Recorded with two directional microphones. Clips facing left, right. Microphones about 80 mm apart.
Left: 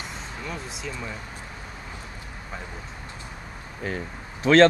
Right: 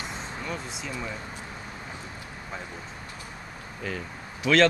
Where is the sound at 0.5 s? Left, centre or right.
Centre.